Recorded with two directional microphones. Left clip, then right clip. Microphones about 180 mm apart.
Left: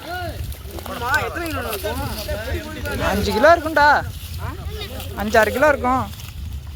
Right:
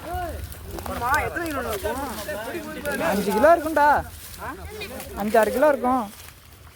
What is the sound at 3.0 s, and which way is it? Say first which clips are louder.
Speech: left 3 dB; 5° right (ahead or behind).